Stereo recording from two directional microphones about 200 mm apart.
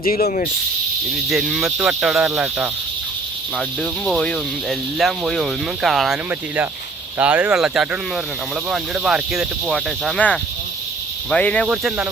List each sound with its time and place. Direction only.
0.0 s speech: 35° left (ahead or behind)
1.3 s speech: centre (ahead or behind)
7.2 s speech: 5° right (ahead or behind)